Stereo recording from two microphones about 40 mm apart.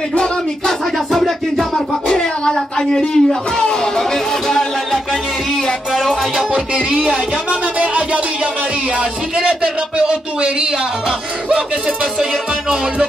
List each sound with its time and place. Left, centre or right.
0.2 s music: centre
6.5 s speech: right
7.8 s music: right
9.4 s speech: right